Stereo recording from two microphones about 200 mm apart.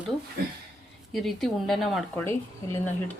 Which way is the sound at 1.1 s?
Centre (ahead or behind).